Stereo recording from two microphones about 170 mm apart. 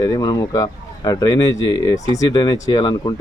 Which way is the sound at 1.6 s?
90° left.